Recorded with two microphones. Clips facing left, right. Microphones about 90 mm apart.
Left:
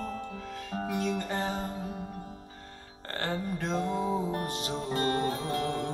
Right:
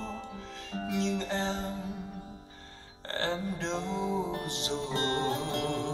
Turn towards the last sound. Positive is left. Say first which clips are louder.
# left 1 dB
turn(degrees=50)  # may be behind; listen again after turning